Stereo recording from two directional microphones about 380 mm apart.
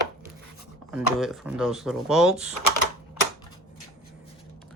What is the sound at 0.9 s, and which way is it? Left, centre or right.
Speech, centre.